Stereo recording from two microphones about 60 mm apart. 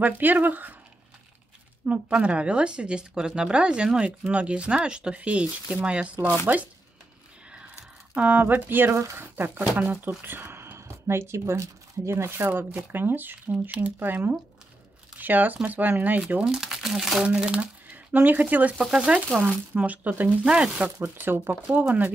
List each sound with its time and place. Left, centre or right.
0.0 s speech: right
1.9 s speech: right
8.1 s speech: right
16.4 s speech: centre
17.2 s speech: centre
20.4 s speech: centre
21.2 s speech: right
21.7 s speech: right